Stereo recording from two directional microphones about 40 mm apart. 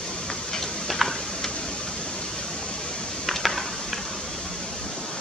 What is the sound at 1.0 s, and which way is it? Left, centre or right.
Tick-tock, centre.